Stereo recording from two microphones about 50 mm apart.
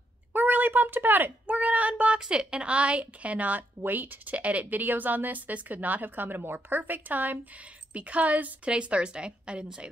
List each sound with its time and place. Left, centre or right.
0.3 s a sound: right
1.5 s speech: right
2.1 s a woman's voice: centre